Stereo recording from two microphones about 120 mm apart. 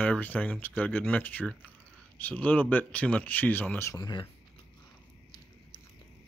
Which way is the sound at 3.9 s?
40° left (ahead or behind).